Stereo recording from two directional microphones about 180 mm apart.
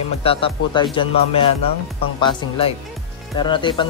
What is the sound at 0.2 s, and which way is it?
Speech, 30° left (ahead or behind).